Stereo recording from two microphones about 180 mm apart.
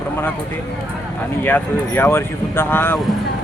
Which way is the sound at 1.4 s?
10° left (ahead or behind).